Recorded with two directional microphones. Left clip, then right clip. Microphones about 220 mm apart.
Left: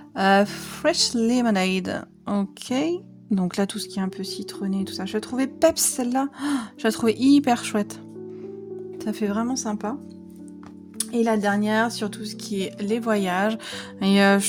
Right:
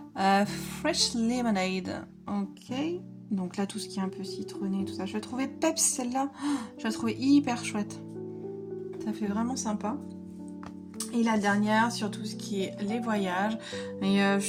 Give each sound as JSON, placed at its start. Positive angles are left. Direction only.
{"t": 0.2, "sound": "speech", "side_deg": 40}
{"t": 9.0, "sound": "speech", "side_deg": 45}
{"t": 11.1, "sound": "speech", "side_deg": 40}